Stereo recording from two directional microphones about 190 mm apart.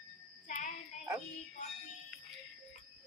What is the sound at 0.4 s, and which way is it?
Child singing, 45° left (ahead or behind).